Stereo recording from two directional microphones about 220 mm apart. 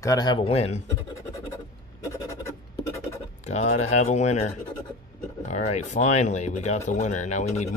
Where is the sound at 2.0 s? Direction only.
15° left (ahead or behind).